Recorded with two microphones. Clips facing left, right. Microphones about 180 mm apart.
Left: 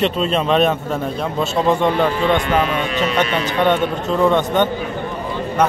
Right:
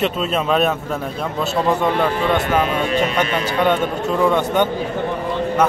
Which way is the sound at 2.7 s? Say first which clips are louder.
Right 1 dB; 40° right (ahead or behind).